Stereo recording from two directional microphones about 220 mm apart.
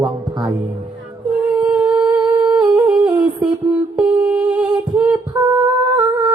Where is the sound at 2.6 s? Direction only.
20° right (ahead or behind).